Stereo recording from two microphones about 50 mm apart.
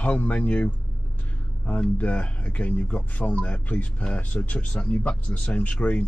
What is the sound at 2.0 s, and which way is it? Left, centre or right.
Speech, left.